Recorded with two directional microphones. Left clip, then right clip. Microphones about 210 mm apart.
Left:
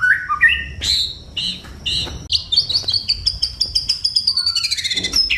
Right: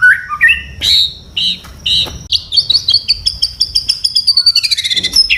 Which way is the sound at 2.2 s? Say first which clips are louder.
Right 1 dB; 20° left (ahead or behind).